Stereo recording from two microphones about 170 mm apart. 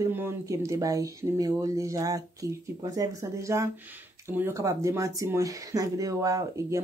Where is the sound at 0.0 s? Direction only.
15° right (ahead or behind).